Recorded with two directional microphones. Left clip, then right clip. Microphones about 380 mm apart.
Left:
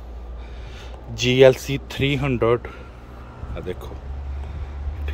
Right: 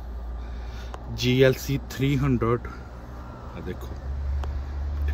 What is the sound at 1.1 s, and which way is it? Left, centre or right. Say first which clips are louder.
A man's voice: left 7 dB; centre.